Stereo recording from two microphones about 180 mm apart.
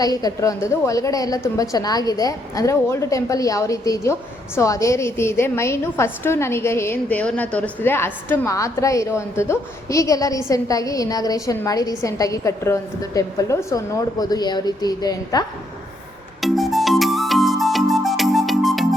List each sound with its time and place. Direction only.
0.0 s a woman's voice: 20° left (ahead or behind)
16.4 s music: centre (ahead or behind)